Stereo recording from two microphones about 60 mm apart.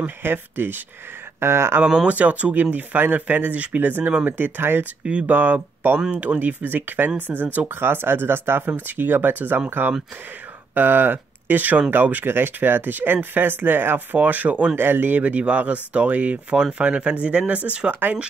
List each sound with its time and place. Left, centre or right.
0.0 s speech: right
1.4 s speech: right
2.0 s speech: right
5.2 s speech: right
14.8 s speech: right